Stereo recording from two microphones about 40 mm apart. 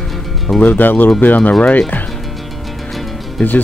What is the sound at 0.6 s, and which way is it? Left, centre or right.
Speech, left.